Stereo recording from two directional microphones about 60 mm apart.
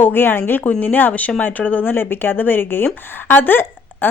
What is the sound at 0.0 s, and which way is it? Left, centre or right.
Speech, left.